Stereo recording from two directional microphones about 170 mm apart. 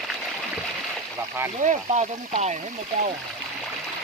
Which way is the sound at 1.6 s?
45° right (ahead or behind).